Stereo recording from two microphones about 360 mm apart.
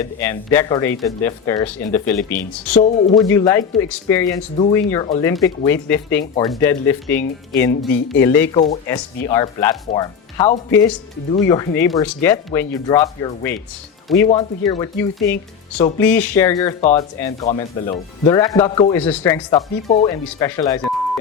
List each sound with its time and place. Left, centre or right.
0.0 s speech: centre
2.7 s speech: centre
3.2 s speech: centre